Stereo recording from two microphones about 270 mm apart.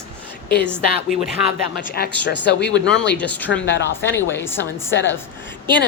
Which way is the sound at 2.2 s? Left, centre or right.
Left.